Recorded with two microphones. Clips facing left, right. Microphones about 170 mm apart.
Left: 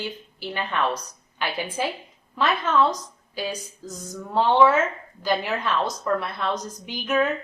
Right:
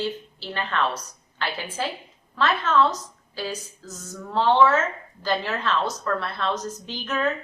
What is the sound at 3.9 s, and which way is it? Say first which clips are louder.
A woman's voice: left 2 dB; 10° left (ahead or behind).